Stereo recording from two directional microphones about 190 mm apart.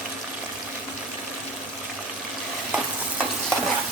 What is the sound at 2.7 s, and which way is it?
Stir, 5° right (ahead or behind).